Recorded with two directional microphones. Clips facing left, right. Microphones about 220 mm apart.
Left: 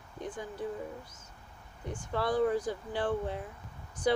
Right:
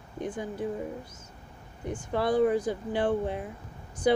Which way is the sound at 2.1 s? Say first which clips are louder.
Right 4 dB; 20° right (ahead or behind).